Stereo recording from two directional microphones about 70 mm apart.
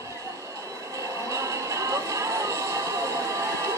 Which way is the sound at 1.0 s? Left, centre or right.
Right.